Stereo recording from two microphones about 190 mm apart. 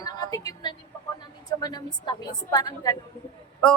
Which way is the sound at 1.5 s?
20° left (ahead or behind).